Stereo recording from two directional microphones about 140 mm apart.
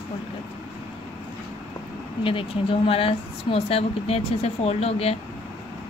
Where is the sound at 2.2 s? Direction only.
40° left (ahead or behind).